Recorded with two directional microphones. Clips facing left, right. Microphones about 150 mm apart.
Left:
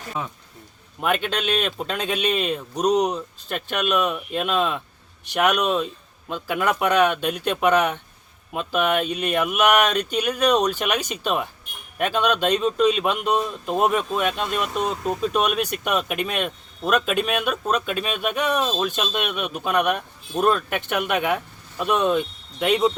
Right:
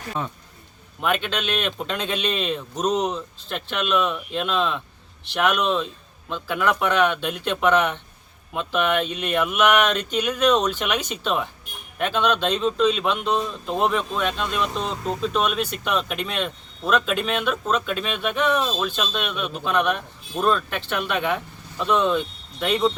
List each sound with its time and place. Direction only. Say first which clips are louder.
1.0 s a man's voice: left 1 dB; 5° left (ahead or behind)